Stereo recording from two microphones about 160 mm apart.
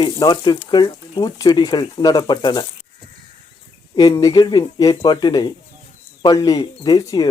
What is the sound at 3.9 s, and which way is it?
Speech, 25° left (ahead or behind).